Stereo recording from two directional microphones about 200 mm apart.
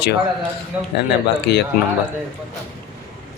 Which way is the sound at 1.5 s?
55° left (ahead or behind).